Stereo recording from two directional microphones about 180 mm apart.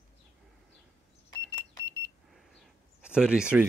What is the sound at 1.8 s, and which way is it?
Beep, 75° right (ahead or behind).